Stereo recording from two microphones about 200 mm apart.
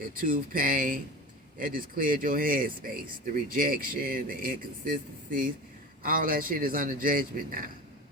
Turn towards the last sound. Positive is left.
turn(degrees=-45)  # may be behind; listen again after turning